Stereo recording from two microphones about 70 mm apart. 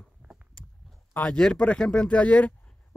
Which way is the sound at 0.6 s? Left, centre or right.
Centre.